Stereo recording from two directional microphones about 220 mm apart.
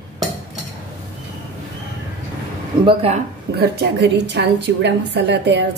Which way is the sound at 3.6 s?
50° right (ahead or behind).